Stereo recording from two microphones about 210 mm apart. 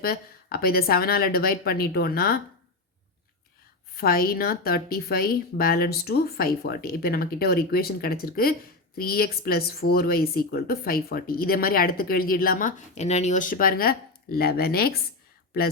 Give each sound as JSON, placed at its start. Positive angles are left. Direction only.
{"t": 0.0, "sound": "speech", "side_deg": 45}
{"t": 3.9, "sound": "speech", "side_deg": 45}